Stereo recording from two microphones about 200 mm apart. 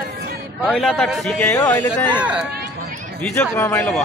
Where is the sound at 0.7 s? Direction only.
Centre (ahead or behind).